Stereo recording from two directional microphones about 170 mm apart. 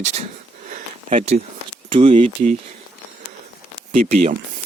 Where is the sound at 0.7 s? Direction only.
50° right (ahead or behind).